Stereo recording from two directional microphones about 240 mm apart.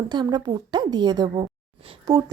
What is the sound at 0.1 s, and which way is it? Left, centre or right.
A woman's voice, centre.